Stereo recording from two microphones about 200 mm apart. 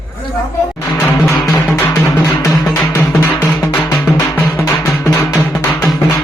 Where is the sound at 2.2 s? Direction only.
15° left (ahead or behind).